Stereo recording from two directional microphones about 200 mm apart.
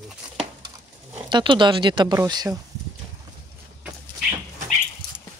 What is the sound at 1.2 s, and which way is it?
Speech, 25° right (ahead or behind).